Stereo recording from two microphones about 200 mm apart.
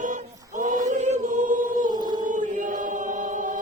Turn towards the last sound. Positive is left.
turn(degrees=-40)  # may be behind; listen again after turning